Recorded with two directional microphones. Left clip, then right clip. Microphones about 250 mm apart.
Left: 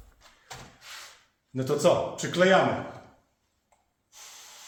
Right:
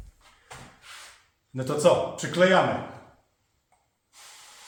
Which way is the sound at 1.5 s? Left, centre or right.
Centre.